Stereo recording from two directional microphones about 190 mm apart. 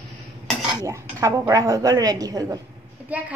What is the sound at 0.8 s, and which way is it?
A woman's voice, 15° right (ahead or behind).